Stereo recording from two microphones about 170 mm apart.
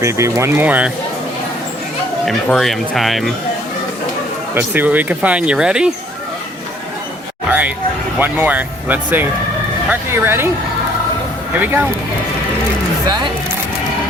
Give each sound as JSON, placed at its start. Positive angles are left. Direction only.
{"t": 0.0, "sound": "speech", "side_deg": -15}
{"t": 2.2, "sound": "speech", "side_deg": 0}
{"t": 4.5, "sound": "speech", "side_deg": -10}
{"t": 8.2, "sound": "speech", "side_deg": -10}
{"t": 11.5, "sound": "speech", "side_deg": -10}